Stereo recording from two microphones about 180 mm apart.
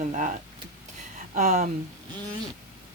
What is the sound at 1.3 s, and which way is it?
Speech, 40° right (ahead or behind).